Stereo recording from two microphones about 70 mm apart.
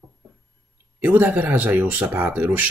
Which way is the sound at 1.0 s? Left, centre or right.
Right.